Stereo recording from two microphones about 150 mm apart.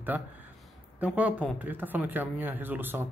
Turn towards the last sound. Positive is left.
turn(degrees=-15)  # may be behind; listen again after turning